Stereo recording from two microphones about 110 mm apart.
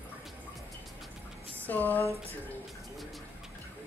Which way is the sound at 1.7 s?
15° left (ahead or behind).